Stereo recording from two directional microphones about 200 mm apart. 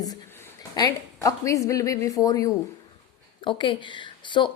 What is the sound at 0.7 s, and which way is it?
A woman's voice, 15° left (ahead or behind).